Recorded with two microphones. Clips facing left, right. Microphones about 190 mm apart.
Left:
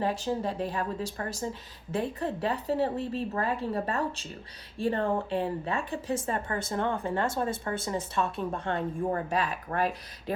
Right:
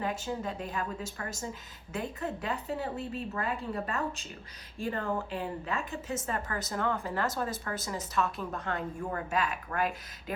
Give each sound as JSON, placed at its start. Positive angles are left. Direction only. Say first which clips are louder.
{"t": 0.0, "sound": "a woman's voice", "louder": "left 5 dB", "side_deg": 30}